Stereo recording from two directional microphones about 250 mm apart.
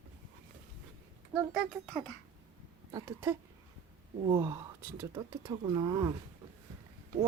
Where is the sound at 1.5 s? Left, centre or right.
Centre.